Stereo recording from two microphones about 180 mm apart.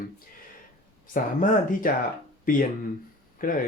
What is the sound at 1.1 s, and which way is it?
Speech, 50° left (ahead or behind).